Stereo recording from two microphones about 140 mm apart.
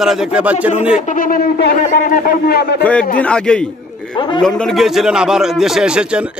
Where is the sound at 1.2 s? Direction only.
85° left.